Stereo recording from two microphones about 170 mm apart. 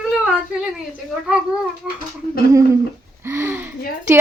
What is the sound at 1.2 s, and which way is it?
Speech, 5° right (ahead or behind).